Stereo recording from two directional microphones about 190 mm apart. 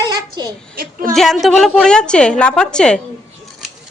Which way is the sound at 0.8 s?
45° right (ahead or behind).